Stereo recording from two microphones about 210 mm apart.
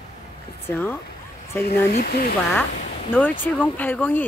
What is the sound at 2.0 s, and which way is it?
Speech, 45° left (ahead or behind).